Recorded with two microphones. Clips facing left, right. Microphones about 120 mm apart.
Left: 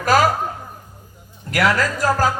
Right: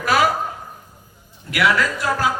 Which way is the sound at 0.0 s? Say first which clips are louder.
Left 2 dB; 40° left (ahead or behind).